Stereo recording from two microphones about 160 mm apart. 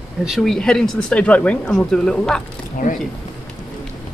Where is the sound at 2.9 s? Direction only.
50° left (ahead or behind).